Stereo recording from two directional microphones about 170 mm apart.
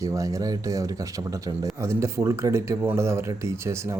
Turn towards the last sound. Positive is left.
turn(degrees=-15)  # may be behind; listen again after turning